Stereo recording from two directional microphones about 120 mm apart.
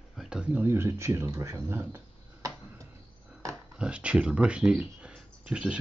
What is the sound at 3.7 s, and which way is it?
Speech, 10° right (ahead or behind).